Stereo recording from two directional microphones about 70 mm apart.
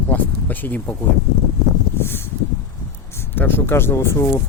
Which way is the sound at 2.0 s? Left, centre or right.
Left.